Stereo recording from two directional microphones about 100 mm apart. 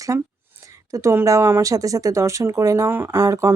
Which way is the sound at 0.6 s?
35° right (ahead or behind).